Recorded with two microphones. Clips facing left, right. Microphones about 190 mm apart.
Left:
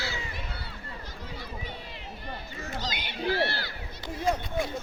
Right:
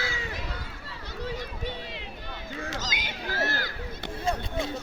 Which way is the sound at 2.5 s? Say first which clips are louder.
Right 6 dB; 90° right.